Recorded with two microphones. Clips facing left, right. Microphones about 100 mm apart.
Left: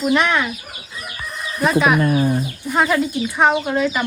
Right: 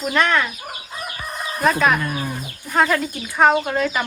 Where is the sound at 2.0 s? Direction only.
45° left (ahead or behind).